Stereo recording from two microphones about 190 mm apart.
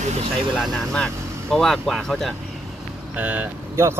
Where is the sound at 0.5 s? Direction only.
5° left (ahead or behind).